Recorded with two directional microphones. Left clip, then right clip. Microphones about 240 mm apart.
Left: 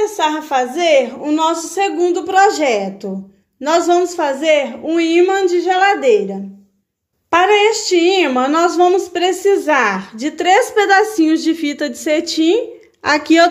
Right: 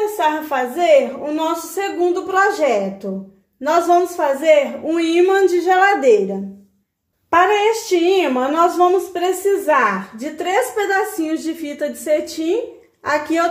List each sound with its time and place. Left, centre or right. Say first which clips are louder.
0.2 s a woman's voice: left 1 dB; left
4.8 s a woman's voice: left 2 dB; centre
7.2 s a woman's voice: left 2 dB; centre; by 13.5 s left